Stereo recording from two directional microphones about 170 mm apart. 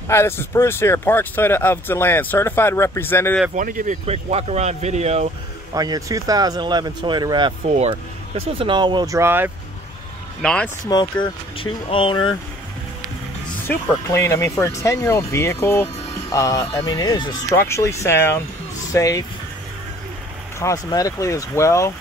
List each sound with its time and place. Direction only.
0.1 s speech: 15° left (ahead or behind)
3.5 s speech: 50° right (ahead or behind)
5.8 s speech: 20° right (ahead or behind)
10.4 s speech: 5° left (ahead or behind)
10.9 s speech: 25° left (ahead or behind)
13.7 s speech: 15° left (ahead or behind)
20.5 s speech: 20° left (ahead or behind)